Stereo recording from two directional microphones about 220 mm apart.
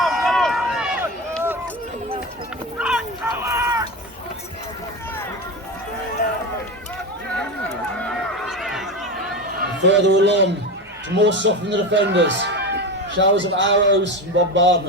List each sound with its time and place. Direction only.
0.0 s run: centre (ahead or behind)
2.7 s a sound: 5° right (ahead or behind)
6.2 s run: 35° left (ahead or behind)
7.9 s run: 5° left (ahead or behind)
9.6 s a man's voice: 55° right (ahead or behind)